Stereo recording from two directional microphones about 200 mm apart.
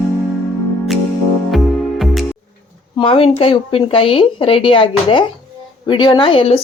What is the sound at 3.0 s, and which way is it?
Speech, 25° left (ahead or behind).